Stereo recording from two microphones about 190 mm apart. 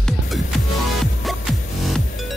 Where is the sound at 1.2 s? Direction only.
Centre (ahead or behind).